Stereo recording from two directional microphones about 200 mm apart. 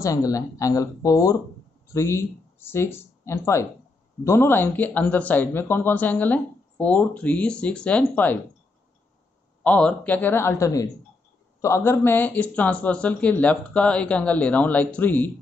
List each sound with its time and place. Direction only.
0.0 s speech: 15° left (ahead or behind)
9.6 s speech: 5° left (ahead or behind)